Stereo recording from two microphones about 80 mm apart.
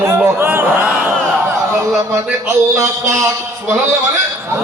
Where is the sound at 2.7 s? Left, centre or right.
Right.